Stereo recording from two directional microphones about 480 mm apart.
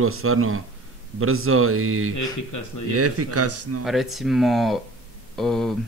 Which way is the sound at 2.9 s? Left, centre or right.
Right.